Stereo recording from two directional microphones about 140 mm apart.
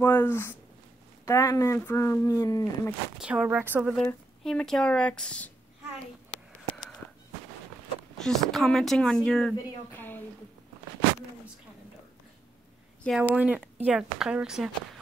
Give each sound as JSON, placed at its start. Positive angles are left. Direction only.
{"t": 0.0, "sound": "speech", "side_deg": 15}
{"t": 3.2, "sound": "speech", "side_deg": -5}
{"t": 4.5, "sound": "speech", "side_deg": 5}
{"t": 8.2, "sound": "speech", "side_deg": 5}
{"t": 9.9, "sound": "a sound", "side_deg": 15}
{"t": 13.0, "sound": "speech", "side_deg": 10}
{"t": 13.4, "sound": "speech", "side_deg": -10}